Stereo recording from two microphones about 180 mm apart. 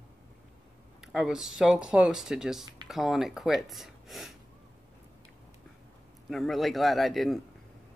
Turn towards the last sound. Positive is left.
turn(degrees=0)  # may be behind; listen again after turning